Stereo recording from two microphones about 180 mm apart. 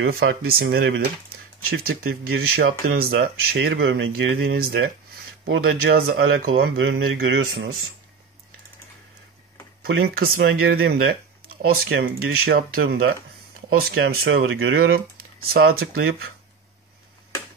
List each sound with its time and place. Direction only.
0.0 s speech: 85° right
4.5 s speech: 60° right (ahead or behind)
10.0 s speech: 60° right (ahead or behind)
13.7 s speech: 65° right (ahead or behind)
15.5 s speech: 55° right (ahead or behind)